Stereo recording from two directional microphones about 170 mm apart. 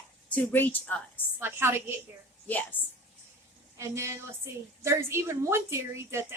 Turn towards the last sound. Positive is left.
turn(degrees=-15)  # may be behind; listen again after turning